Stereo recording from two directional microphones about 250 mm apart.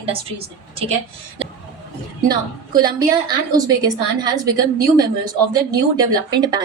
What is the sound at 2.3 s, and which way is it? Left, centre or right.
A woman's voice, centre.